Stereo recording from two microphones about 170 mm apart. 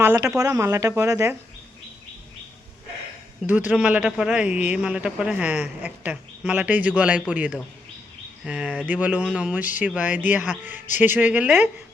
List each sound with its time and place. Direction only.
0.0 s a woman's voice: 15° right (ahead or behind)
3.4 s a woman's voice: 10° right (ahead or behind)